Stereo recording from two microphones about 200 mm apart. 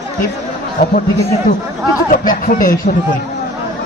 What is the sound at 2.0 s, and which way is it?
Speech, 45° left (ahead or behind).